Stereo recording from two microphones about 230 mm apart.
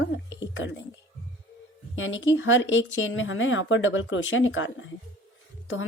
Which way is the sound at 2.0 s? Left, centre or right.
Left.